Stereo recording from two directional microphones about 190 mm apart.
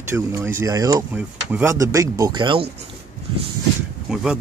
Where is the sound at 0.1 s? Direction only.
15° right (ahead or behind).